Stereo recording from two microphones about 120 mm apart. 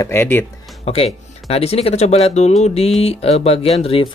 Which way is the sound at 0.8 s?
60° left (ahead or behind).